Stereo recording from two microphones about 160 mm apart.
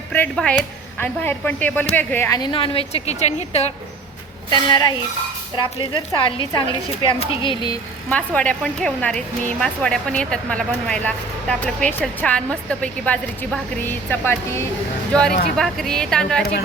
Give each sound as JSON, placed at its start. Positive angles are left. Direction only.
{"t": 0.1, "sound": "a woman's voice", "side_deg": 10}
{"t": 2.4, "sound": "a woman's voice", "side_deg": 35}
{"t": 4.5, "sound": "a woman's voice", "side_deg": 25}
{"t": 8.1, "sound": "a woman's voice", "side_deg": 10}